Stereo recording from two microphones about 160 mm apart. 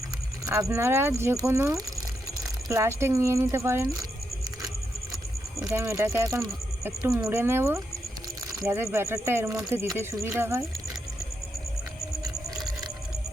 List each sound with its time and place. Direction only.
0.4 s speech: 20° right (ahead or behind)
5.6 s speech: 20° right (ahead or behind)